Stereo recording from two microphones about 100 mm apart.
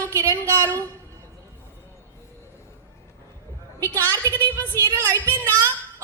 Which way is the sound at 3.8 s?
20° left (ahead or behind).